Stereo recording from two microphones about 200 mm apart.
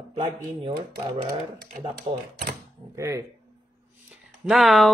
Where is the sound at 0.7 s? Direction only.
25° right (ahead or behind).